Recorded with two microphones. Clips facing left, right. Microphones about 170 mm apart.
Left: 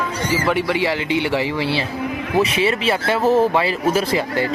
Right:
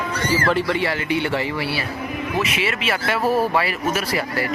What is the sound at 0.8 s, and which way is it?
Speech, 20° left (ahead or behind).